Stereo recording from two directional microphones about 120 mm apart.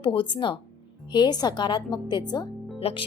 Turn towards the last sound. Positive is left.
turn(degrees=55)  # may be behind; listen again after turning